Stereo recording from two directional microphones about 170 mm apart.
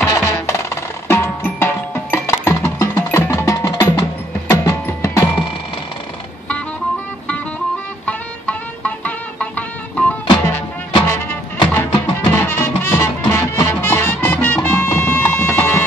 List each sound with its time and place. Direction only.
0.0 s music: 15° left (ahead or behind)
8.0 s music: 10° left (ahead or behind)